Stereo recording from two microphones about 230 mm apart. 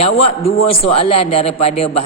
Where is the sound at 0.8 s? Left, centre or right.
Left.